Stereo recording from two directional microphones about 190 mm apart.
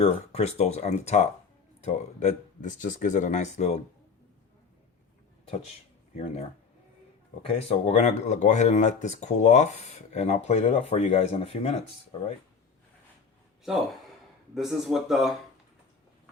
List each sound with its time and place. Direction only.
0.0 s speech: 35° left (ahead or behind)
7.4 s speech: 30° left (ahead or behind)
14.5 s speech: centre (ahead or behind)